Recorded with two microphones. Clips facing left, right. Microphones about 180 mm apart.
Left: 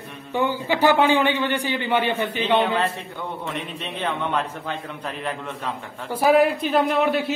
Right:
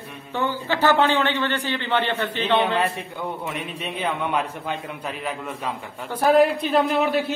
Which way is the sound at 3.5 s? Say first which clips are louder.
Even; 10° right (ahead or behind).